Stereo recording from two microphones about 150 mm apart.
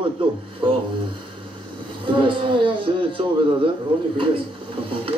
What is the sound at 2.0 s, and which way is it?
Speech, 35° right (ahead or behind).